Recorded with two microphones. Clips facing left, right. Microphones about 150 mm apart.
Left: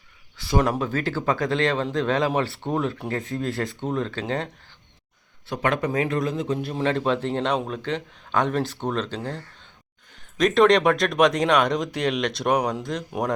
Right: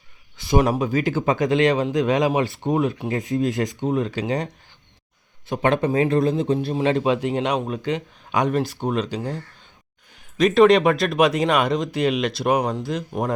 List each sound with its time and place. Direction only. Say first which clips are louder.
0.3 s a sound: right 3 dB; 20° right (ahead or behind)
0.7 s a man's voice: right 4 dB; 15° right (ahead or behind)
5.5 s speech: right 4 dB; 25° right (ahead or behind)
6.7 s a man's voice: right 1 dB; 15° right (ahead or behind)